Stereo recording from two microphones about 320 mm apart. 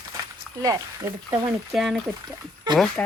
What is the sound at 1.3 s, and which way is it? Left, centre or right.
Speech, centre.